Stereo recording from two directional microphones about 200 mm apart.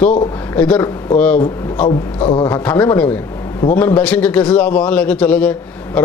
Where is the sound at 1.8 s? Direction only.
25° left (ahead or behind).